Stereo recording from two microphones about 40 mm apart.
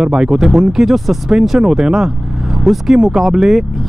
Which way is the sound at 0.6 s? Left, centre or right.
Centre.